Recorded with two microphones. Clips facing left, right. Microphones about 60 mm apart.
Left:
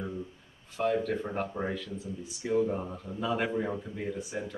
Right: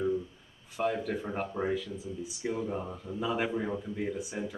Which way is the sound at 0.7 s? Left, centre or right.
Centre.